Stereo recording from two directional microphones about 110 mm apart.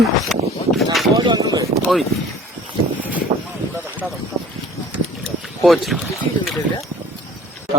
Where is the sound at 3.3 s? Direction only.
50° right (ahead or behind).